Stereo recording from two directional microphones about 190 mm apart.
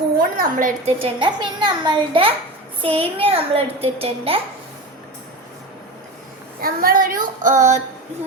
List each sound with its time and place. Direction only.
0.2 s a child's voice: 50° right (ahead or behind); by 4.4 s 30° right (ahead or behind)
6.6 s female singing: 50° right (ahead or behind)